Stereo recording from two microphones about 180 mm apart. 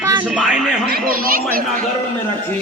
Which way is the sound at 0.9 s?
55° right (ahead or behind).